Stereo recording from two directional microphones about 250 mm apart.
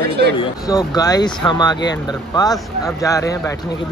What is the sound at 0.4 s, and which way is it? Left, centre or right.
Speech, centre.